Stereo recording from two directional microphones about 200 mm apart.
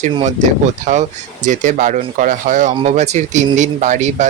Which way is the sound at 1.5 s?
40° right (ahead or behind).